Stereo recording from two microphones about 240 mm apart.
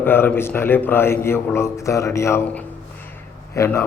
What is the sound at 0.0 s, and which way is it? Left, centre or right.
A man's voice, centre.